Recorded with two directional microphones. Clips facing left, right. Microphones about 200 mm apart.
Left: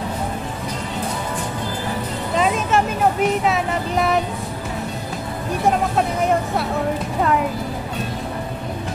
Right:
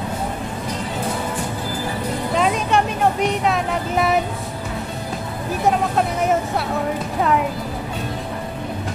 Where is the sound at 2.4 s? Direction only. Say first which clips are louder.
Left 1 dB; centre (ahead or behind).